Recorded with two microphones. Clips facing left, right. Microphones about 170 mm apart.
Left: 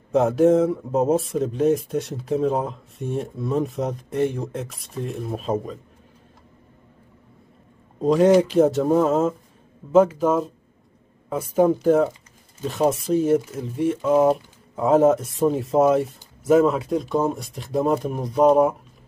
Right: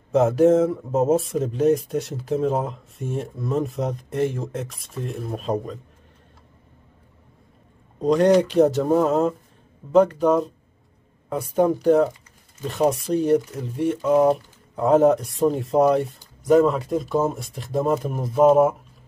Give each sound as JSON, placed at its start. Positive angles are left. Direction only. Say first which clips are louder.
{"t": 0.1, "sound": "speech", "louder": "even", "side_deg": 0}
{"t": 8.0, "sound": "speech", "louder": "left 1 dB", "side_deg": 0}